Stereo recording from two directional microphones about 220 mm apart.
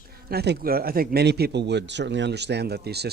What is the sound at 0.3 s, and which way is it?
Speech, 45° right (ahead or behind).